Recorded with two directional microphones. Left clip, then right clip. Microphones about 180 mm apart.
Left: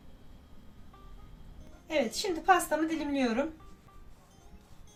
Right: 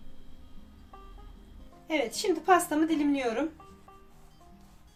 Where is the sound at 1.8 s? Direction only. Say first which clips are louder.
Right 2 dB; 35° right (ahead or behind).